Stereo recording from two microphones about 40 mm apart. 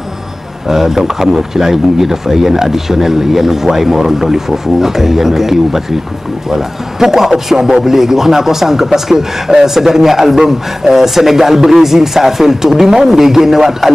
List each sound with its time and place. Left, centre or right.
0.7 s a man's voice: centre